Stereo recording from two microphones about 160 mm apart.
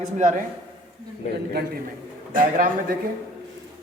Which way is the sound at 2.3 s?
55° right (ahead or behind).